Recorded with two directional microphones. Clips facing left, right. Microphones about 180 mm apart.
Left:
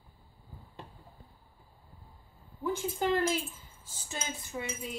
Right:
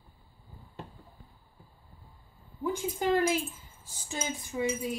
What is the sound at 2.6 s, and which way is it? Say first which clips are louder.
Speech: right 1 dB; 15° right (ahead or behind).